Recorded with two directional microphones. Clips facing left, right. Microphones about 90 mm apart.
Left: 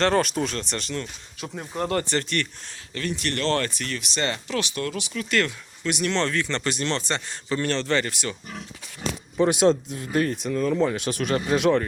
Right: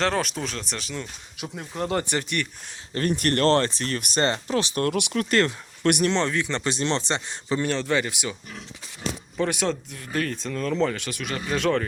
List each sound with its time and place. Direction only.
0.0 s speech: centre (ahead or behind)
2.9 s speech: 45° right (ahead or behind)
3.6 s speech: 30° right (ahead or behind)
4.3 s speech: 30° right (ahead or behind)
4.8 s speech: 65° right (ahead or behind)
5.3 s speech: 30° right (ahead or behind)
6.1 s speech: 15° right (ahead or behind)
9.4 s speech: 20° left (ahead or behind)
10.4 s speech: 10° left (ahead or behind)
11.1 s speech: 40° left (ahead or behind)
11.5 s speech: 15° left (ahead or behind)